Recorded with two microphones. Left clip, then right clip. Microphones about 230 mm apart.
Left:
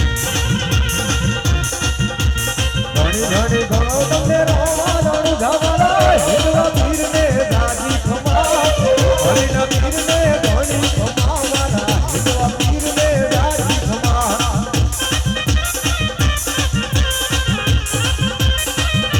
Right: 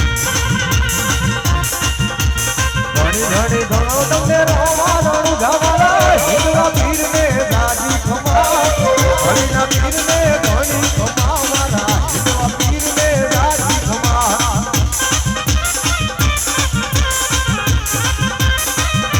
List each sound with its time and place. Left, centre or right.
3.3 s music: centre
5.8 s music: right
9.3 s music: centre
13.3 s music: right